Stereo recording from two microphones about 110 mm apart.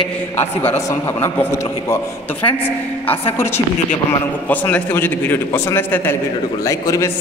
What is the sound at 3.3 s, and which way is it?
A man's voice, 20° left (ahead or behind).